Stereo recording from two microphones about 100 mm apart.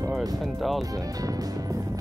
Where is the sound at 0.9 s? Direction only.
35° right (ahead or behind).